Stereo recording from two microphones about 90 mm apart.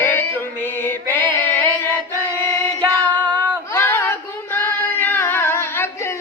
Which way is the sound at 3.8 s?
25° left (ahead or behind).